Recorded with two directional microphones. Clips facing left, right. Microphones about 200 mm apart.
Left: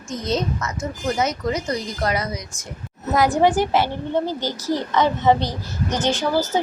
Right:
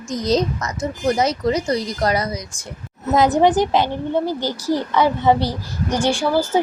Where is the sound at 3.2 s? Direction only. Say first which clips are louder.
Right 2 dB; 20° right (ahead or behind).